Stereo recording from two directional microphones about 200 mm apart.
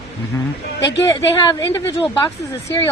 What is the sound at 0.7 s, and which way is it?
Speech, 60° left (ahead or behind).